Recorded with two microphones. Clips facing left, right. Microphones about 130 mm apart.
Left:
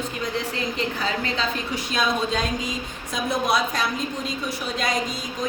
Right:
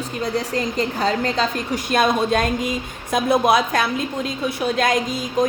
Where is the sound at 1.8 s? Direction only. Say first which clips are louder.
Right 6 dB; 55° right (ahead or behind).